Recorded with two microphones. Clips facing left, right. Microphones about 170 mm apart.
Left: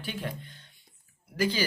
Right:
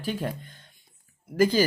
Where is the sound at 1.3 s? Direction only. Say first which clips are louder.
Right 7 dB; 45° right (ahead or behind).